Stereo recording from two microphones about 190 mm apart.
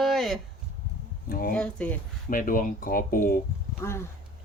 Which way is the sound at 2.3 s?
45° left (ahead or behind).